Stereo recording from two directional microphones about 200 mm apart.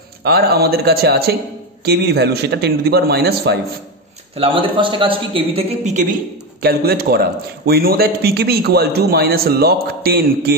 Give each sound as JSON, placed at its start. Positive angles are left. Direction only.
{"t": 0.2, "sound": "a man's voice", "side_deg": -55}
{"t": 4.4, "sound": "a man's voice", "side_deg": -25}
{"t": 6.6, "sound": "a man's voice", "side_deg": -50}